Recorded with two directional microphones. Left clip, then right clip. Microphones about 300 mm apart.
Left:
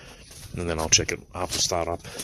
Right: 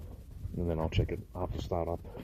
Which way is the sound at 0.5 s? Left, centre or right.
Centre.